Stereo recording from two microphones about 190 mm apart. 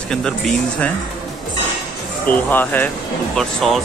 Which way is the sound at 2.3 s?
10° left (ahead or behind).